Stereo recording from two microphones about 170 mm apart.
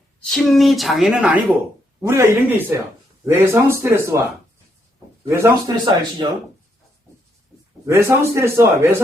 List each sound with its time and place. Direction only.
0.3 s a woman's voice: centre (ahead or behind); by 4.2 s 15° right (ahead or behind)
5.3 s speech: 20° right (ahead or behind)
7.9 s a man's voice: 15° right (ahead or behind)